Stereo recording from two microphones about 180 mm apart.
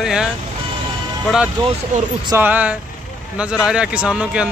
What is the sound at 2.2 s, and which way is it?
A man's voice, 15° right (ahead or behind).